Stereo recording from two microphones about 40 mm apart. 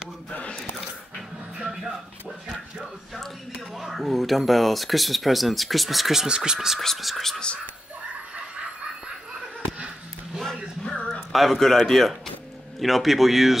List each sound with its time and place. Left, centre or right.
0.3 s a sound: left
1.6 s music: centre
3.7 s speech: centre
6.2 s speech: centre
7.0 s speech: centre
10.4 s music: centre
11.1 s speech: centre